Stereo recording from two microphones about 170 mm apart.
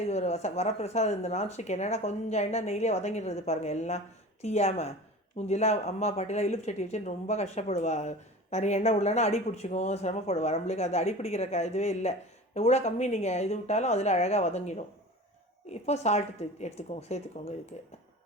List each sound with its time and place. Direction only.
0.0 s speech: 40° left (ahead or behind)